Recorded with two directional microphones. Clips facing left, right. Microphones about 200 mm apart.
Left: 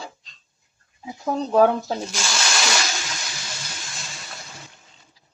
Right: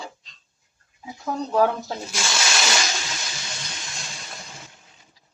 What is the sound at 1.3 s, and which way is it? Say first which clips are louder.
Speech: left 4 dB; 20° left (ahead or behind).